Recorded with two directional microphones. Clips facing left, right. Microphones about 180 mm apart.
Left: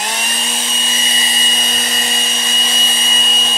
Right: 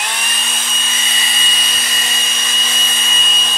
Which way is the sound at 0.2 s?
30° left (ahead or behind).